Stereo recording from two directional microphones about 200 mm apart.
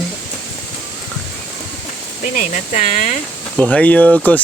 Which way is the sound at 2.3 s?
40° left (ahead or behind).